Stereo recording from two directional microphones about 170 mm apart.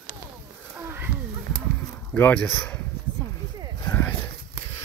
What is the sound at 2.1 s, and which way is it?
Speech, 10° left (ahead or behind).